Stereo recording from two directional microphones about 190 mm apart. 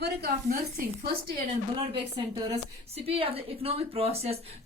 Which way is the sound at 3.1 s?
30° right (ahead or behind).